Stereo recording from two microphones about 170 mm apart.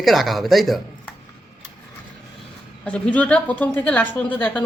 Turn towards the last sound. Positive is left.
turn(degrees=10)  # may be behind; listen again after turning